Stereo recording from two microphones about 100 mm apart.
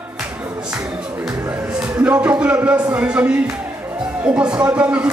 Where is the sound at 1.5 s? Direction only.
10° right (ahead or behind).